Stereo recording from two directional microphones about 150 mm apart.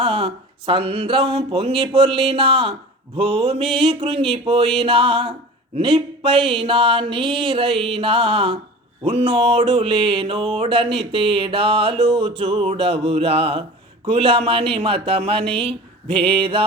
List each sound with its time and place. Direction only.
0.0 s speech: 35° right (ahead or behind)